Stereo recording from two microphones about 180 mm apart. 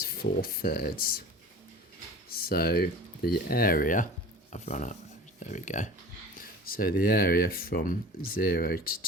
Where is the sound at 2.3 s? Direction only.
55° left (ahead or behind).